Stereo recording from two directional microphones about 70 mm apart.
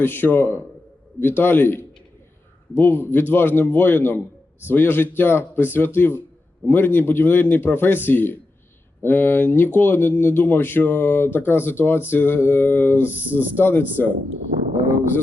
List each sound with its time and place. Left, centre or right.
0.0 s speech: left